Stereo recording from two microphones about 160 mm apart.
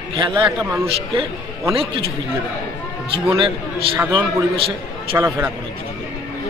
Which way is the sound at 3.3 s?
35° right (ahead or behind).